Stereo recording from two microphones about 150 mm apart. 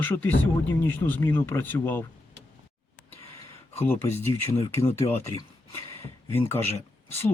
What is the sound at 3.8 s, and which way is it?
Speech, 15° left (ahead or behind).